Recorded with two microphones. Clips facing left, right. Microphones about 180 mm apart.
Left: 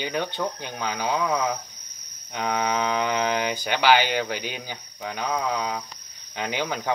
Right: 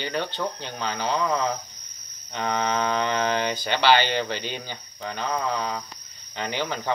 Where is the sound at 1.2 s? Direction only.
Centre (ahead or behind).